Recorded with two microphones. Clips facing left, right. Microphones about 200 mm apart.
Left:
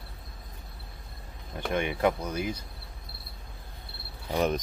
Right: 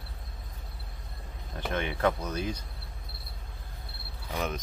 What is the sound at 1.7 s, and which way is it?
Speech, 15° left (ahead or behind).